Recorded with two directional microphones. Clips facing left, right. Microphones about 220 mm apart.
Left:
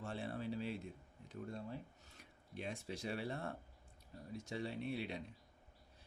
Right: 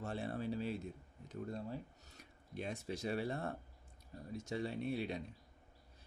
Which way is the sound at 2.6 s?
45° right (ahead or behind).